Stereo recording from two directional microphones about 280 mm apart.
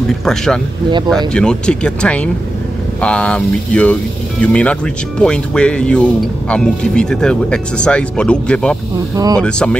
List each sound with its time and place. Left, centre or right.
0.2 s speech: centre
9.1 s speech: centre
9.4 s speech: centre